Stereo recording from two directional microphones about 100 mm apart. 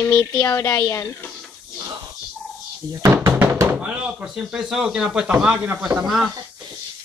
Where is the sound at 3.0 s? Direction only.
25° right (ahead or behind).